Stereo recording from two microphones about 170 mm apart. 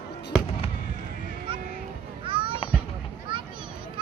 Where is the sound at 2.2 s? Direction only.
30° right (ahead or behind).